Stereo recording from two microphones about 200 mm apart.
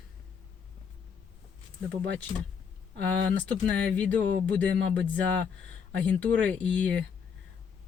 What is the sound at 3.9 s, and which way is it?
Speech, 5° left (ahead or behind).